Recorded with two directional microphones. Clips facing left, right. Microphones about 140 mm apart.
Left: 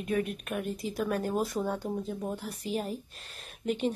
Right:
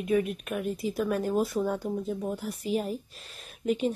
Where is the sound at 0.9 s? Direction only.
5° right (ahead or behind).